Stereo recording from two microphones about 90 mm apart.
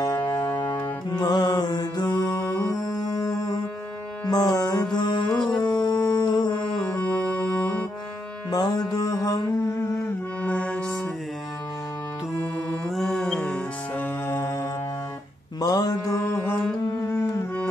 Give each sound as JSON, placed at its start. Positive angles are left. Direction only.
{"t": 1.1, "sound": "mantra", "side_deg": 50}
{"t": 2.8, "sound": "music", "side_deg": 45}
{"t": 5.3, "sound": "music", "side_deg": 5}
{"t": 5.6, "sound": "music", "side_deg": 50}
{"t": 6.8, "sound": "music", "side_deg": 10}
{"t": 8.5, "sound": "music", "side_deg": 45}
{"t": 10.4, "sound": "music", "side_deg": 15}
{"t": 12.9, "sound": "music", "side_deg": 5}
{"t": 13.9, "sound": "music", "side_deg": 20}
{"t": 15.6, "sound": "mantra", "side_deg": 45}
{"t": 16.3, "sound": "music", "side_deg": 25}